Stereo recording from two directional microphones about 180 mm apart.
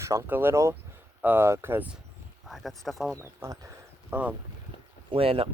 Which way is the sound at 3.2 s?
15° right (ahead or behind).